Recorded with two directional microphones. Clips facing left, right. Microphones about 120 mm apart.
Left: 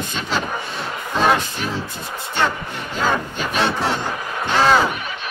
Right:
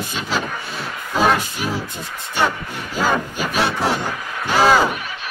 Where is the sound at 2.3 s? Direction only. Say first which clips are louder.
Right 1 dB; 10° right (ahead or behind).